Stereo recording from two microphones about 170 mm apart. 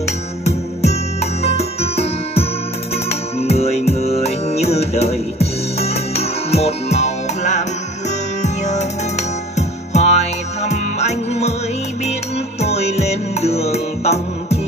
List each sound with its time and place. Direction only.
0.8 s music: 40° left (ahead or behind)